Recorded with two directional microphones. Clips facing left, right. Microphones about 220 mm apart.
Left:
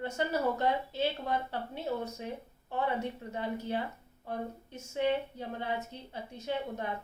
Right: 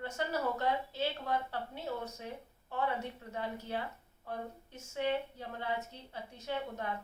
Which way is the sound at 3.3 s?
20° left (ahead or behind).